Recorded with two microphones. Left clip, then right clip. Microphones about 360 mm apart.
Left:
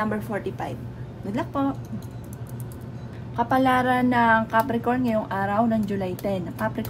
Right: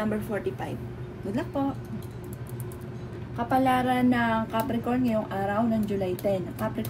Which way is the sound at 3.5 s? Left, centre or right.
Left.